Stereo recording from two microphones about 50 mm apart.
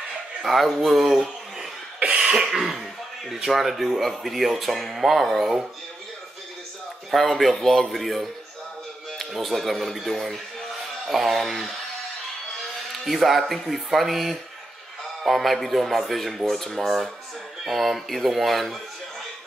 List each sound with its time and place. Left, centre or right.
0.4 s speech: centre
2.0 s cough: right
2.4 s speech: centre
7.1 s speech: centre
9.3 s a man's voice: centre
13.0 s speech: centre